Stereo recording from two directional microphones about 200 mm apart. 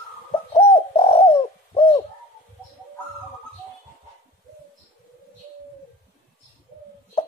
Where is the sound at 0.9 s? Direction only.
30° left (ahead or behind).